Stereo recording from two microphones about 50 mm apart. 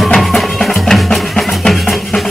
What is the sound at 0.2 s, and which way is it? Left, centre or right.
Music, centre.